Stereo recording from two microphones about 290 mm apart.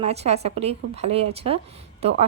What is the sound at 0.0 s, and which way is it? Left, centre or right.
A woman's voice, right.